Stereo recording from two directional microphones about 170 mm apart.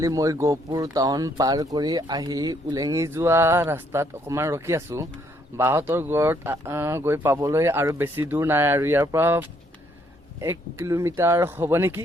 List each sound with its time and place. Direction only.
0.0 s speech: 20° right (ahead or behind)